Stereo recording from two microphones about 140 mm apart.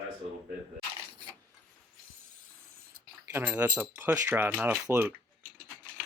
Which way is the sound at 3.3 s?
15° right (ahead or behind).